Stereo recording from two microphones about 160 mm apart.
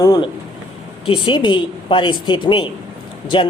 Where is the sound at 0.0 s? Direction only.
25° left (ahead or behind).